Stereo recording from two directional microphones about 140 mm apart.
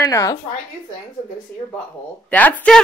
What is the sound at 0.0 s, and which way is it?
Speech, 25° left (ahead or behind).